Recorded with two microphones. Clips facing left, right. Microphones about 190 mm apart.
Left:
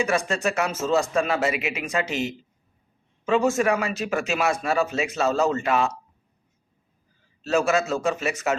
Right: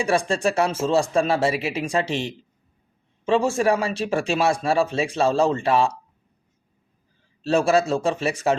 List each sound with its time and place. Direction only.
0.0 s speech: 30° right (ahead or behind)
7.4 s speech: 30° right (ahead or behind)